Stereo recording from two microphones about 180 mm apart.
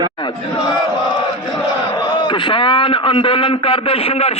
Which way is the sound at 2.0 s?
25° left (ahead or behind).